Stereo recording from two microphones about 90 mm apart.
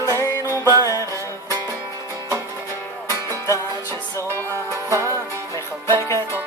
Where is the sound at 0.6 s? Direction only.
35° right (ahead or behind).